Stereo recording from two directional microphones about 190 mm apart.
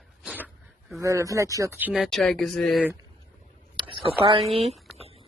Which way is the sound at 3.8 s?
25° right (ahead or behind).